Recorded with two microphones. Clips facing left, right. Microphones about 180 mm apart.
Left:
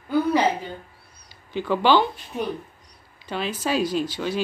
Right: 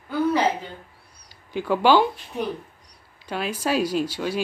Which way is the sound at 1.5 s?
5° right (ahead or behind).